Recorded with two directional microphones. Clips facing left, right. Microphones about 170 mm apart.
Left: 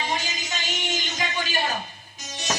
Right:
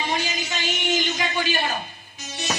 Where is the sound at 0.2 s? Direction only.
45° left (ahead or behind).